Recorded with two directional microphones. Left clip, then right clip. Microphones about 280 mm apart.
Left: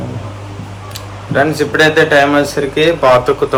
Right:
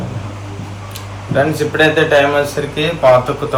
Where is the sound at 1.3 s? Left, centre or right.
Left.